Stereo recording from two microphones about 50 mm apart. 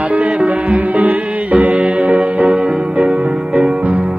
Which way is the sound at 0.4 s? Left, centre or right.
Right.